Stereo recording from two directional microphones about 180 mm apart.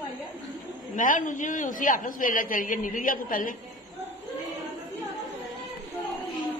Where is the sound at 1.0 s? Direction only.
45° left (ahead or behind).